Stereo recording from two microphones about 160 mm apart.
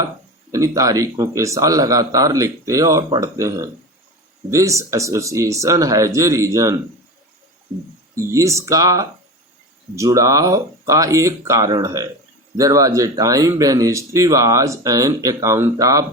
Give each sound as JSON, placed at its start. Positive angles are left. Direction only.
{"t": 0.5, "sound": "speech", "side_deg": -20}
{"t": 8.1, "sound": "speech", "side_deg": -20}